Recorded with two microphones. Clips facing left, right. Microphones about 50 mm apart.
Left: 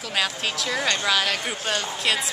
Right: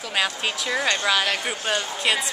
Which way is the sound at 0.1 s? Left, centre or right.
Centre.